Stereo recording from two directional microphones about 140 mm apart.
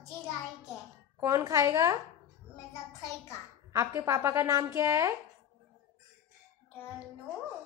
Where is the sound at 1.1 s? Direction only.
20° right (ahead or behind).